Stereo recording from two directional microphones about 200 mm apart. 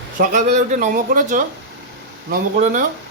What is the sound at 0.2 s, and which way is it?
Speech, 40° right (ahead or behind).